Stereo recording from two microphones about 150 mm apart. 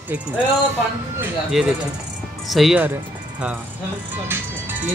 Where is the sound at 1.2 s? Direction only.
5° right (ahead or behind).